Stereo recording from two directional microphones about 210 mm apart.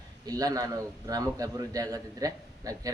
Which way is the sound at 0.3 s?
15° right (ahead or behind).